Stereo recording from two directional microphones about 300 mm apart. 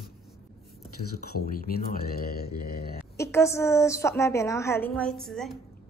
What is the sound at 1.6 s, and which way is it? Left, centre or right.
Speech, left.